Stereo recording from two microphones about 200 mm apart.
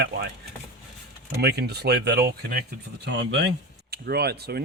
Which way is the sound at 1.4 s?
55° right (ahead or behind).